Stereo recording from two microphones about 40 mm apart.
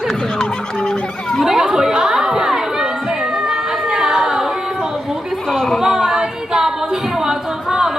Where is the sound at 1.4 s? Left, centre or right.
Centre.